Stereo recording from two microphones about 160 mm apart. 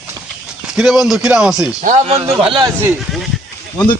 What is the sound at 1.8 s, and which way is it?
Speech, 45° right (ahead or behind).